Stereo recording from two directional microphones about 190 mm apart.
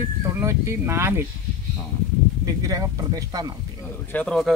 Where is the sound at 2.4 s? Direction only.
20° right (ahead or behind).